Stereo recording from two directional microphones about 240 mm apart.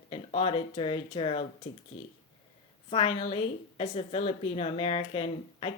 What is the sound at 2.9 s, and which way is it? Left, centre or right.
A woman's voice, left.